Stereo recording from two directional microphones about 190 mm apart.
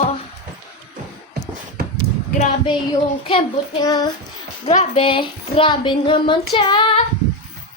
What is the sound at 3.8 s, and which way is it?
Speech, 20° left (ahead or behind).